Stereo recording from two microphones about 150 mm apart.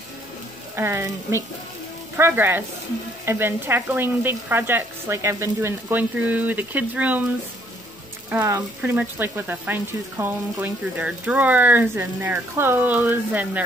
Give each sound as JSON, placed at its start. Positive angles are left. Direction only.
{"t": 0.7, "sound": "speech", "side_deg": -15}
{"t": 8.3, "sound": "speech", "side_deg": -15}